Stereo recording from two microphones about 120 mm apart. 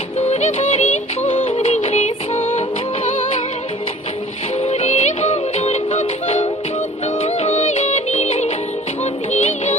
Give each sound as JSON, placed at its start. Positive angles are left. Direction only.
{"t": 1.2, "sound": "music", "side_deg": 55}
{"t": 2.0, "sound": "music", "side_deg": 65}
{"t": 4.6, "sound": "music", "side_deg": 60}